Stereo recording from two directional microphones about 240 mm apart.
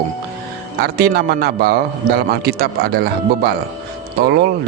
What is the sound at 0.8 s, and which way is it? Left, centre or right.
A man's voice, right.